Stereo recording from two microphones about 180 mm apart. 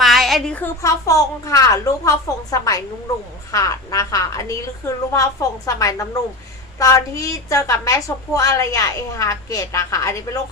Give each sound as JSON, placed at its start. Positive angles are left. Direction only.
{"t": 0.0, "sound": "a woman's voice", "side_deg": 0}